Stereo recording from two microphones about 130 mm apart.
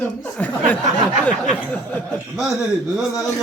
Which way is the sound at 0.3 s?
10° left (ahead or behind).